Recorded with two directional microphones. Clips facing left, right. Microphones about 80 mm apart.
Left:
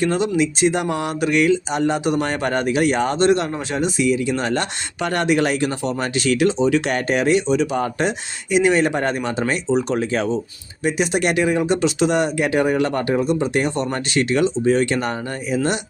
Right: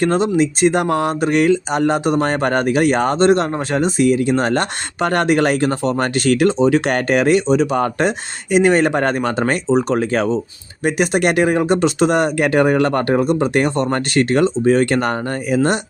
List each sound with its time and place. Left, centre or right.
0.0 s speech: right